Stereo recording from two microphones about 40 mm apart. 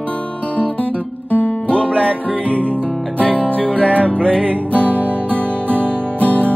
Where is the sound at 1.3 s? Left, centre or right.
Left.